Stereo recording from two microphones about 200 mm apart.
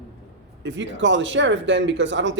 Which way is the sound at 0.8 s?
65° right (ahead or behind).